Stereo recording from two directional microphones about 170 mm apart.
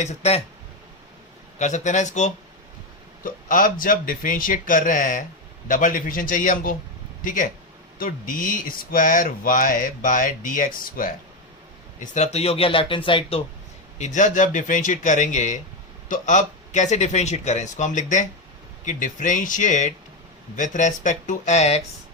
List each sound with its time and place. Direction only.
0.0 s speech: 40° left (ahead or behind)
1.5 s speech: 45° left (ahead or behind)
11.9 s speech: 45° left (ahead or behind)
14.0 s speech: 45° left (ahead or behind)